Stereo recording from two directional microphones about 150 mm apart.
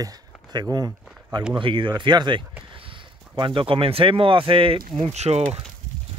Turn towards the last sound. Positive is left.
turn(degrees=-45)  # may be behind; listen again after turning